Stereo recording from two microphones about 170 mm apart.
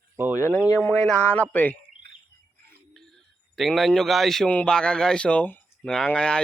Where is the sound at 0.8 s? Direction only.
5° left (ahead or behind).